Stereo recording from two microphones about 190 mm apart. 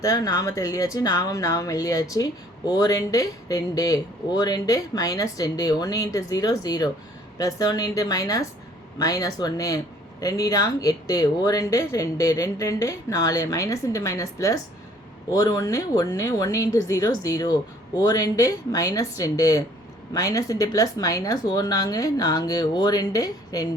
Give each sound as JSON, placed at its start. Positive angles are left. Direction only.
{"t": 0.0, "sound": "speech", "side_deg": 20}